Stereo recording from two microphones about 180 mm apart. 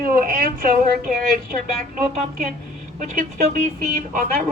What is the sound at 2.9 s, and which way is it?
Speech, 45° right (ahead or behind).